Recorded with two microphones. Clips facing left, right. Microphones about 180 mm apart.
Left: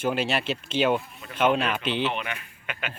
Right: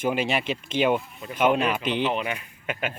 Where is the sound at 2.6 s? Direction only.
45° right (ahead or behind).